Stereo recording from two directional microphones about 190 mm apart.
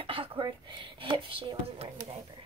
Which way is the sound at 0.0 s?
30° right (ahead or behind).